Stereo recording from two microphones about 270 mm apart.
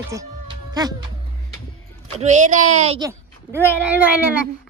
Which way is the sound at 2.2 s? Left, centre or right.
Right.